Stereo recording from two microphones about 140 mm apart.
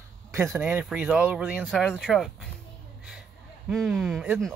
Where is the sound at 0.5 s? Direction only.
10° right (ahead or behind).